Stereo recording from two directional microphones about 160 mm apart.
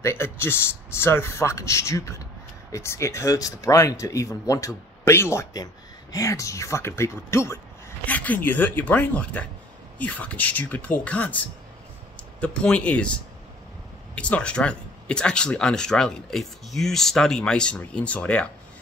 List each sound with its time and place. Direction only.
0.0 s speech: 15° left (ahead or behind)